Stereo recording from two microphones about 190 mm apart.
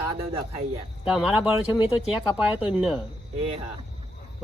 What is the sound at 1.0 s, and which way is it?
Speech, 5° right (ahead or behind).